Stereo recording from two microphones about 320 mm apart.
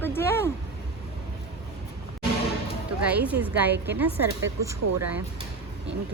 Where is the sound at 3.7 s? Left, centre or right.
Right.